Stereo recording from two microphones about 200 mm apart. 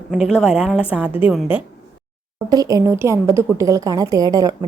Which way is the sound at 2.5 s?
20° right (ahead or behind).